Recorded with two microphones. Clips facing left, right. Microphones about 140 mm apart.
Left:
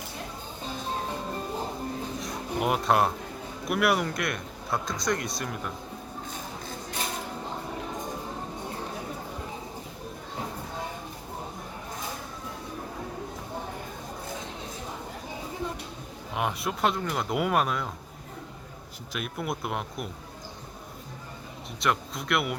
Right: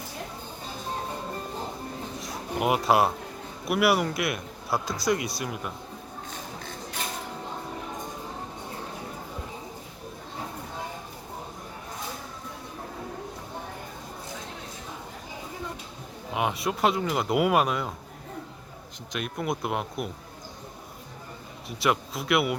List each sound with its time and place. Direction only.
2.2 s a sound: 5° right (ahead or behind)
3.7 s speech: 5° right (ahead or behind)
16.3 s speech: centre (ahead or behind)
19.1 s speech: centre (ahead or behind)
21.8 s speech: 5° right (ahead or behind)